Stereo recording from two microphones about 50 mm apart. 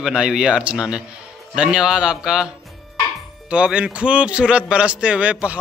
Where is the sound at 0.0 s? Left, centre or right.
Centre.